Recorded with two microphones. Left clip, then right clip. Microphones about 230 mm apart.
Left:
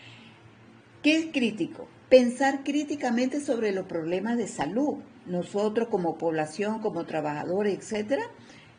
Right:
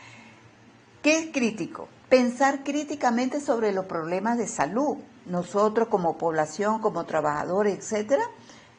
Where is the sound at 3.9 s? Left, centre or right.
Right.